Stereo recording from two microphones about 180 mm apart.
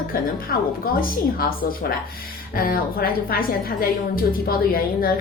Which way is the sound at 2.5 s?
55° left (ahead or behind).